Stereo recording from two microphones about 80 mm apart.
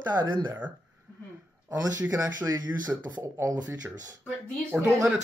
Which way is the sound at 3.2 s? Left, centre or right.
Right.